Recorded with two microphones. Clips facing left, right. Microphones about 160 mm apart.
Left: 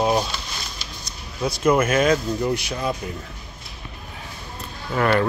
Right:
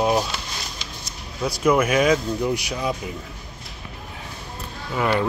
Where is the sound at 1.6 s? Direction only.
10° right (ahead or behind).